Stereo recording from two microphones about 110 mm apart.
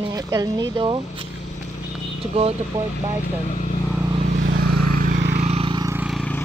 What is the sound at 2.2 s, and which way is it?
Speech, 65° right (ahead or behind).